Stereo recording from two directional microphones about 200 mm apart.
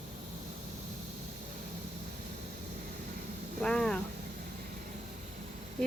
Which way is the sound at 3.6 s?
5° left (ahead or behind).